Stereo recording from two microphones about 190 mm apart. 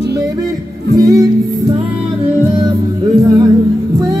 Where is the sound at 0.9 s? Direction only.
15° right (ahead or behind).